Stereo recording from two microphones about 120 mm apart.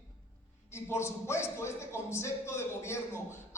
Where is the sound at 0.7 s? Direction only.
20° left (ahead or behind).